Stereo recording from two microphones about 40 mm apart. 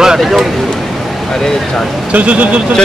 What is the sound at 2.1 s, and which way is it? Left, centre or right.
Speech, right.